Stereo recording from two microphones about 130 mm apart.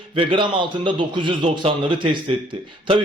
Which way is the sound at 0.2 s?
40° right (ahead or behind).